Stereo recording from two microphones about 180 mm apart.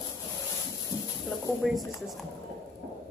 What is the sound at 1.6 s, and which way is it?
Speech, centre (ahead or behind).